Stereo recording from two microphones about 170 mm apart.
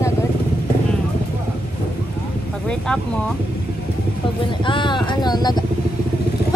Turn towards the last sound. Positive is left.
turn(degrees=25)  # may be behind; listen again after turning